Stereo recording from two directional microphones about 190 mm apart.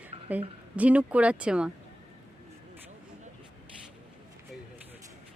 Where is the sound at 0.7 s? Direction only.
5° right (ahead or behind).